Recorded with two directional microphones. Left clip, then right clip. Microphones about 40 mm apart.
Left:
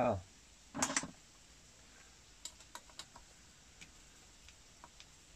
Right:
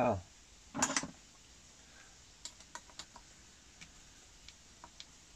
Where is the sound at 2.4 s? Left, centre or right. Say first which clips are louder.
Right 2 dB; centre.